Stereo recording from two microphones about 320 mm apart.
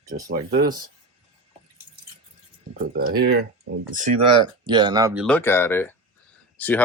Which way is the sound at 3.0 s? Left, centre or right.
Right.